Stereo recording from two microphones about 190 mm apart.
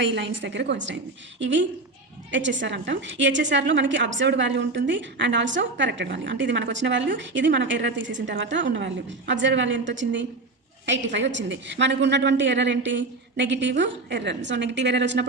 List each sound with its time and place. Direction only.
0.0 s a woman's voice: 70° right (ahead or behind)